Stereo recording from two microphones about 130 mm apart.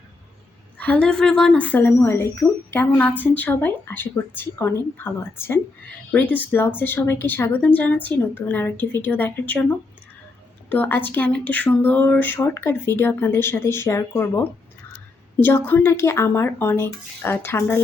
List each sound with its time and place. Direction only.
0.8 s a woman's voice: 10° left (ahead or behind)